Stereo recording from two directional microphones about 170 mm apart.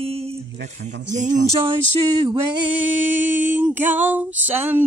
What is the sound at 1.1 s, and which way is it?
Speech, 45° right (ahead or behind).